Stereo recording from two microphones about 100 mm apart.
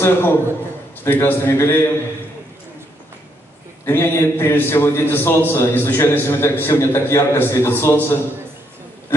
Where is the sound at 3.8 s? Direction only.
25° left (ahead or behind).